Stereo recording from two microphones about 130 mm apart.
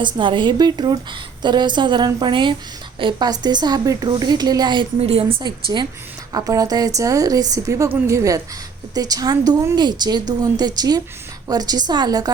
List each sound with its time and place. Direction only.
0.0 s a woman's voice: 40° right (ahead or behind)
4.9 s a woman's voice: 50° right (ahead or behind)
5.4 s a woman's voice: 35° right (ahead or behind)